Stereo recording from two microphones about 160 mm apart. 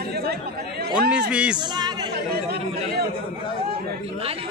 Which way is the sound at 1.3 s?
5° right (ahead or behind).